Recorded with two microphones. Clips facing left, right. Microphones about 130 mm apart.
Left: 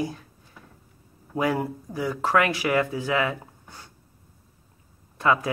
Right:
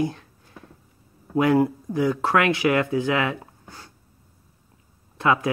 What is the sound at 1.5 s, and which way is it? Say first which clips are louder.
Speech: right 8 dB; 5° left (ahead or behind).